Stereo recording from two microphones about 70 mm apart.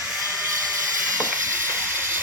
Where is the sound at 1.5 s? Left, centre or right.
Right.